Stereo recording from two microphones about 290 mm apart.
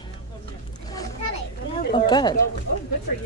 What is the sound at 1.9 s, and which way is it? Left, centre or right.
Speech, centre.